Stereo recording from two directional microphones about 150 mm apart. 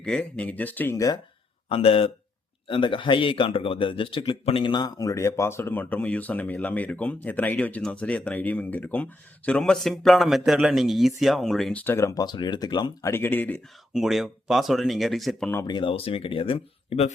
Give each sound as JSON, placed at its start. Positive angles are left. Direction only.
{"t": 0.0, "sound": "a man's voice", "side_deg": 5}
{"t": 1.7, "sound": "a man's voice", "side_deg": 40}
{"t": 12.2, "sound": "speech", "side_deg": 30}
{"t": 13.9, "sound": "speech", "side_deg": 0}
{"t": 15.6, "sound": "speech", "side_deg": 30}